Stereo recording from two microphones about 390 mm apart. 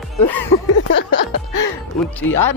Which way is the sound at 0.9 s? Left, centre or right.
Left.